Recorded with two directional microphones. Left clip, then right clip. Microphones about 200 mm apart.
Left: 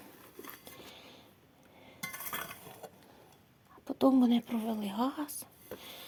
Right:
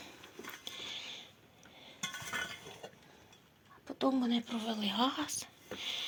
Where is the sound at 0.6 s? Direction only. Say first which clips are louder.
Right 8 dB; 40° left (ahead or behind).